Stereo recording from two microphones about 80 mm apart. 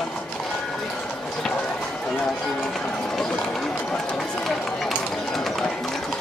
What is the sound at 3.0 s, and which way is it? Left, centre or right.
Run, centre.